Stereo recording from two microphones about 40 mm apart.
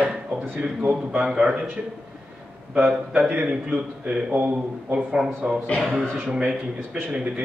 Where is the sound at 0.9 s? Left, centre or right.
Right.